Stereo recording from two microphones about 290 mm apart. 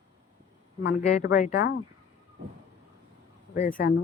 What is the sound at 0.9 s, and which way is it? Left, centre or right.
Speech, left.